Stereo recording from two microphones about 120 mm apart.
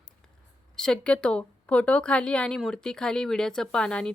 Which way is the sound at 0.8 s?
10° left (ahead or behind).